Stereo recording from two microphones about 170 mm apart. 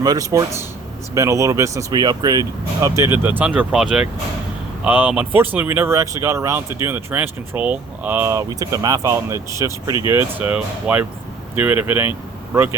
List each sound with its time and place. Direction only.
0.0 s speech: 20° right (ahead or behind)